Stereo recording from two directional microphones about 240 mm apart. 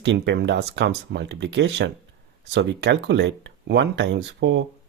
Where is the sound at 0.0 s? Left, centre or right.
Right.